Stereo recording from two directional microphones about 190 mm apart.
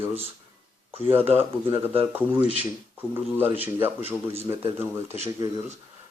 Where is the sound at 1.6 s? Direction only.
25° right (ahead or behind).